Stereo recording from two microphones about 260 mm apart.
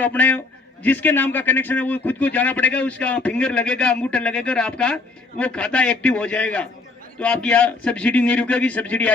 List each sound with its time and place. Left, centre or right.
0.0 s a man's voice: centre